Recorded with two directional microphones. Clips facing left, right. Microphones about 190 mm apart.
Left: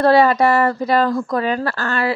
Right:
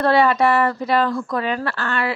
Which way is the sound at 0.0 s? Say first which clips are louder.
Left 3 dB; 35° left (ahead or behind).